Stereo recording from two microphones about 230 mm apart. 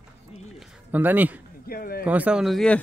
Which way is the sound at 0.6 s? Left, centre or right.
Centre.